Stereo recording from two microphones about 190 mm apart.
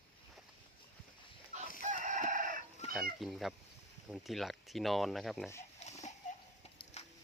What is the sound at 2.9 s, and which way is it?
Speech, centre (ahead or behind).